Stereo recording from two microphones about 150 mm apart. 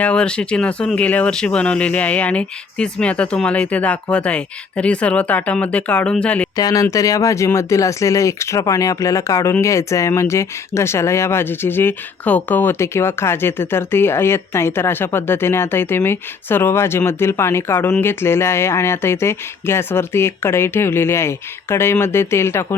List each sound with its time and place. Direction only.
0.0 s speech: 5° left (ahead or behind)
6.6 s speech: 25° left (ahead or behind)